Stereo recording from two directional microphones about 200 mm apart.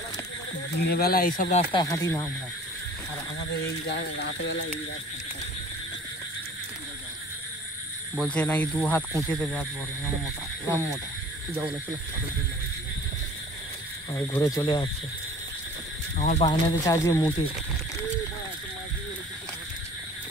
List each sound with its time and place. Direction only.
0.8 s speech: 50° left (ahead or behind)
1.6 s speech: 20° left (ahead or behind)
3.9 s speech: 60° left (ahead or behind)
8.2 s speech: 5° left (ahead or behind)
14.1 s speech: 20° left (ahead or behind)
16.2 s speech: 35° left (ahead or behind)
16.4 s speech: 20° left (ahead or behind)